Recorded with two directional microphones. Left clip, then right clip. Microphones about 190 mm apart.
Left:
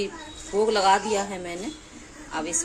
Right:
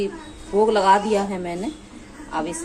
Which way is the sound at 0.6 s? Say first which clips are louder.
Right 4 dB; centre (ahead or behind).